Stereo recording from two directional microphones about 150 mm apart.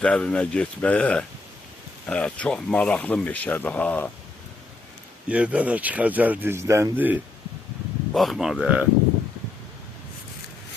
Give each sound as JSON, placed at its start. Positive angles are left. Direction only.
{"t": 0.0, "sound": "speech", "side_deg": 5}
{"t": 5.3, "sound": "speech", "side_deg": -10}
{"t": 8.1, "sound": "speech", "side_deg": 0}